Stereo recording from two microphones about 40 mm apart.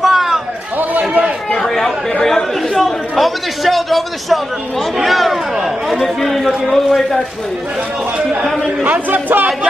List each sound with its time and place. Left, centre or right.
0.0 s chatter: centre
0.7 s a sound: right
1.5 s chatter: centre
2.2 s a man's voice: centre
8.8 s a man's voice: right